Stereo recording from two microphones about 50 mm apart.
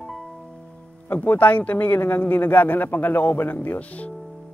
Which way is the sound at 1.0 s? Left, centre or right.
Left.